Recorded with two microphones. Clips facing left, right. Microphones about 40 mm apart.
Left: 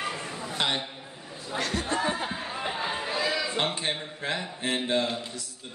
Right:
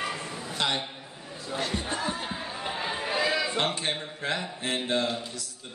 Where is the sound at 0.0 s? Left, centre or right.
Centre.